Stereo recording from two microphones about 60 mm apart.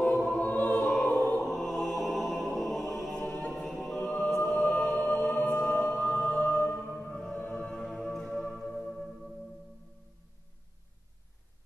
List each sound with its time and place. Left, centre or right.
0.4 s music: left
1.4 s music: centre
5.0 s music: left
8.5 s singing bowl: centre
8.9 s music: centre